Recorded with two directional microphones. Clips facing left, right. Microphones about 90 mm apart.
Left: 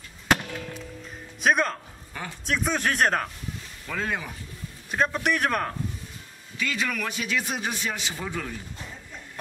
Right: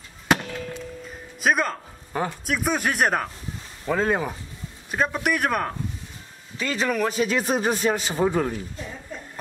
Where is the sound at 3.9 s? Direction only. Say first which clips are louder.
Right 8 dB; 35° right (ahead or behind).